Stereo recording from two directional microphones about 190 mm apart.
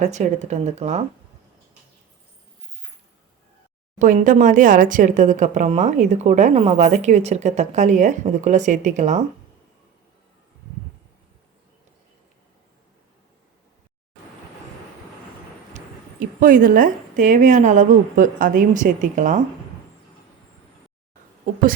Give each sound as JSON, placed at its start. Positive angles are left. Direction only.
{"t": 0.0, "sound": "speech", "side_deg": -35}
{"t": 3.9, "sound": "speech", "side_deg": -40}
{"t": 16.4, "sound": "a woman's voice", "side_deg": -45}